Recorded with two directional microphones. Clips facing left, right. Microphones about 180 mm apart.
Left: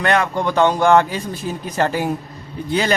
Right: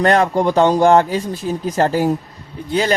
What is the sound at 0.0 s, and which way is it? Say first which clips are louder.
Speech: right 4 dB; 35° right (ahead or behind).